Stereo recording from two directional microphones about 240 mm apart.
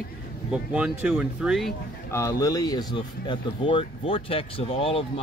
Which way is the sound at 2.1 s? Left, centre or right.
Centre.